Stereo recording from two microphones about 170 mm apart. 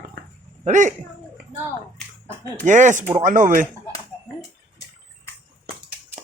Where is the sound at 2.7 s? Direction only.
45° right (ahead or behind).